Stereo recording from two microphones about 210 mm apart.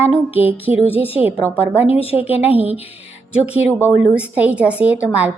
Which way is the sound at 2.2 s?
10° right (ahead or behind).